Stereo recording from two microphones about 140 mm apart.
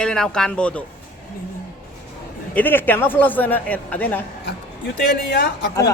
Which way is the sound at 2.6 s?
15° left (ahead or behind).